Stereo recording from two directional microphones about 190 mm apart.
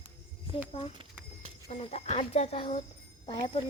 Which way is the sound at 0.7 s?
30° left (ahead or behind).